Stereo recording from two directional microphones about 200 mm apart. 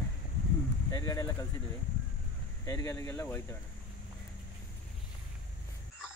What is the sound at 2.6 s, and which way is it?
Speech, 15° left (ahead or behind).